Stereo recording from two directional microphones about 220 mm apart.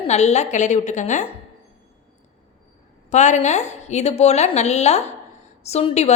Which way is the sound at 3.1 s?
30° left (ahead or behind).